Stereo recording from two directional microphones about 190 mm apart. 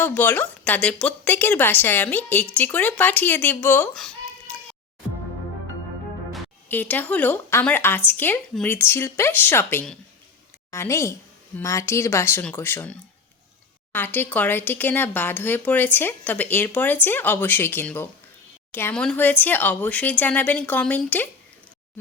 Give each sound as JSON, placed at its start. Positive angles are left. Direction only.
{"t": 0.0, "sound": "a woman's voice", "side_deg": 10}
{"t": 6.7, "sound": "a woman's voice", "side_deg": 10}